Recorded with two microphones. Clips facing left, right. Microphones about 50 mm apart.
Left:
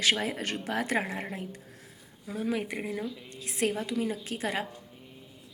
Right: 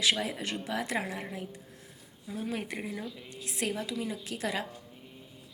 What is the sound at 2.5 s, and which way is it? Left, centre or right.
Speech, centre.